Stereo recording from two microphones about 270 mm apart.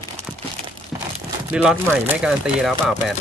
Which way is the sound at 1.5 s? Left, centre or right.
Centre.